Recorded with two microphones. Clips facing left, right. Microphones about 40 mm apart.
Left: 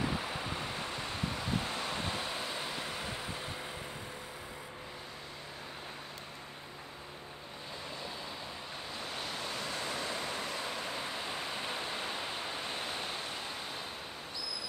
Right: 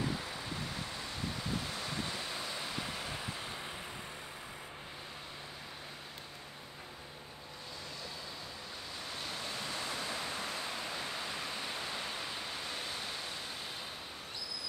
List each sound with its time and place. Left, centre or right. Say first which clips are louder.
0.2 s waves: left 3 dB; left
2.3 s vehicle: left 2 dB; centre
9.5 s waves: left 1 dB; centre
11.2 s waterfall: left 2 dB; left